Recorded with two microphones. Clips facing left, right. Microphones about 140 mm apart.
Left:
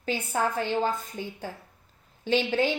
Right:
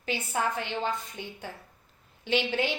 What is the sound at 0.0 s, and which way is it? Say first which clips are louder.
A woman's voice: left 2 dB; 45° left (ahead or behind).